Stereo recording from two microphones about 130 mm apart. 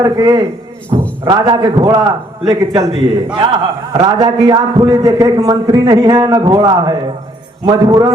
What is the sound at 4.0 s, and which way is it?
A man's voice, 30° right (ahead or behind).